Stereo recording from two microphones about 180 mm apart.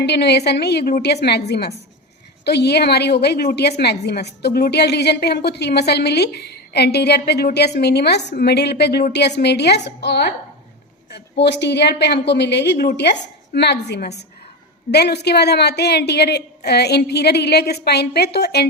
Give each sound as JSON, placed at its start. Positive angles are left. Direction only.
{"t": 0.0, "sound": "a woman's voice", "side_deg": 65}